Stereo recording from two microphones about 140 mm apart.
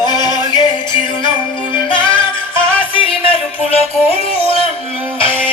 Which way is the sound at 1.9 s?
35° left (ahead or behind).